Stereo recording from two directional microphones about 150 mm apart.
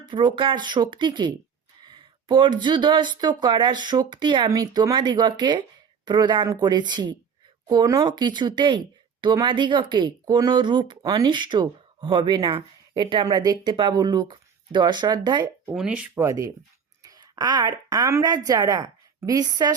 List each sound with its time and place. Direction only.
0.1 s speech: 35° right (ahead or behind)
15.7 s speech: 5° right (ahead or behind)
16.2 s speech: 20° right (ahead or behind)